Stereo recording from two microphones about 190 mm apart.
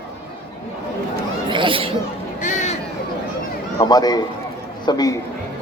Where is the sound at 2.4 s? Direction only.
40° left (ahead or behind).